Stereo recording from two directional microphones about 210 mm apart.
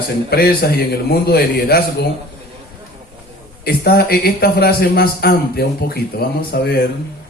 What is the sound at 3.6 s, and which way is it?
A man's voice, 45° left (ahead or behind).